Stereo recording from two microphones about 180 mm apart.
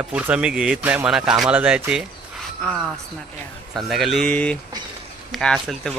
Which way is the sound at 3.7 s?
Centre (ahead or behind).